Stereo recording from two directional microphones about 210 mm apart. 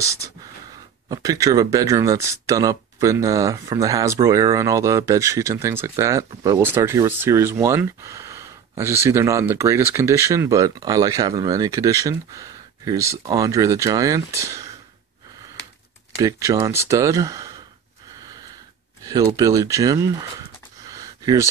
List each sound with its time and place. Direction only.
1.0 s speech: 20° right (ahead or behind)
16.2 s speech: 15° right (ahead or behind)
19.0 s speech: 20° right (ahead or behind)
20.9 s a sound: 15° right (ahead or behind)